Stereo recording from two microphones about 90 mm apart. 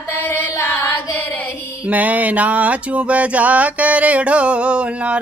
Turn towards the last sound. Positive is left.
turn(degrees=-10)  # may be behind; listen again after turning